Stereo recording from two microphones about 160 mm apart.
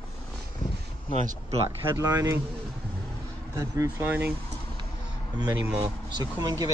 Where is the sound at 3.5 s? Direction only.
20° right (ahead or behind).